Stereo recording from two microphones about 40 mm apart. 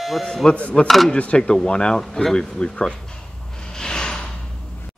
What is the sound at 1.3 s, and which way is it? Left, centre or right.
Speech, centre.